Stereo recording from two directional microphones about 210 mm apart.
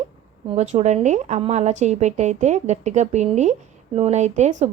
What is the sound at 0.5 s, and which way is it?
Speech, 35° right (ahead or behind).